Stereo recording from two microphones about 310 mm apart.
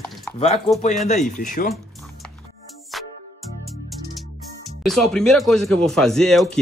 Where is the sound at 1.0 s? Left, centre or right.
Left.